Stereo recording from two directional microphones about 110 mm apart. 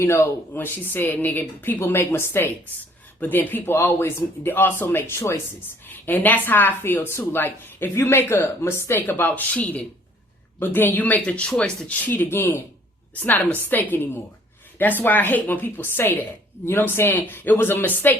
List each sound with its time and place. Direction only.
0.0 s speech: 20° left (ahead or behind)